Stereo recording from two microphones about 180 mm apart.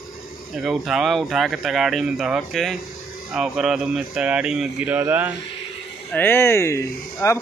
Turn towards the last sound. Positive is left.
turn(degrees=15)  # may be behind; listen again after turning